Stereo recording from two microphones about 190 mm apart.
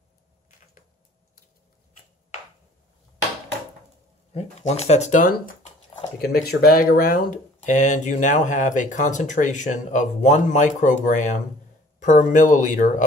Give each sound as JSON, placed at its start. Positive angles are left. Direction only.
{"t": 4.3, "sound": "speech", "side_deg": 35}